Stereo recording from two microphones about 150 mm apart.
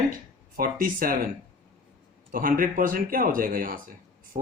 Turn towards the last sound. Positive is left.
turn(degrees=-70)  # may be behind; listen again after turning